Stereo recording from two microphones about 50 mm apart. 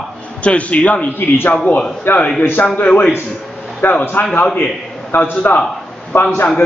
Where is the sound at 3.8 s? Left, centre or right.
Left.